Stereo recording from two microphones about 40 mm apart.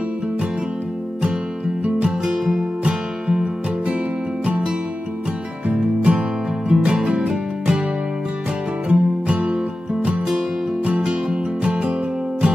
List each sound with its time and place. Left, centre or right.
1.9 s music: right
2.2 s music: centre
5.7 s music: right
8.8 s music: right
11.0 s music: right